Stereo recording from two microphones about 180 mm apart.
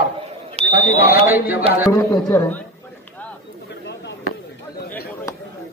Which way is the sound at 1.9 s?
20° left (ahead or behind).